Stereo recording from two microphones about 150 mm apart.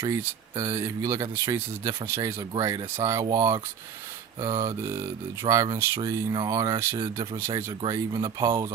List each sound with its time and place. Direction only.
0.0 s speech: 20° right (ahead or behind)
0.5 s speech: 30° right (ahead or behind)
7.5 s speech: 35° right (ahead or behind)